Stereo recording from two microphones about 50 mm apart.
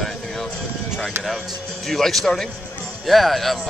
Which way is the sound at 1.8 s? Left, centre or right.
Centre.